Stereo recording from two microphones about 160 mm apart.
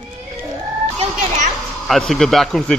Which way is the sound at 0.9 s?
50° right (ahead or behind).